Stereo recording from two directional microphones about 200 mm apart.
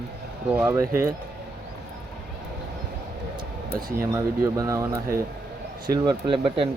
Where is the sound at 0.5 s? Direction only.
15° right (ahead or behind).